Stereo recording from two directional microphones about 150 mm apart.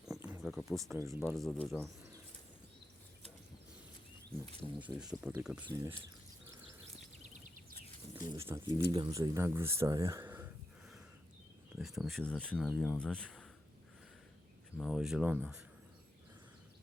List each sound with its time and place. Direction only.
0.0 s a sound: 5° right (ahead or behind)
0.4 s speech: centre (ahead or behind)
0.9 s speech: 20° right (ahead or behind)
1.3 s speech: 5° left (ahead or behind)
4.8 s speech: 10° right (ahead or behind)
5.6 s speech: 20° right (ahead or behind)
7.3 s a sound: 55° right (ahead or behind)
8.2 s speech: 20° right (ahead or behind)
11.8 s speech: centre (ahead or behind)
14.8 s speech: centre (ahead or behind)